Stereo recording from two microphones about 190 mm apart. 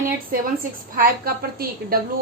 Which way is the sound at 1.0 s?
50° right (ahead or behind).